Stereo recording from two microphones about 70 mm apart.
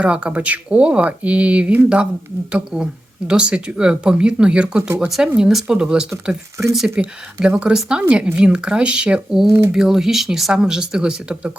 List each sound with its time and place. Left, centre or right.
0.0 s speech: centre
9.5 s speech: right
9.7 s speech: centre